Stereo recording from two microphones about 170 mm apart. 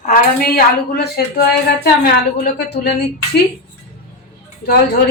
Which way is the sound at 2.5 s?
75° left (ahead or behind).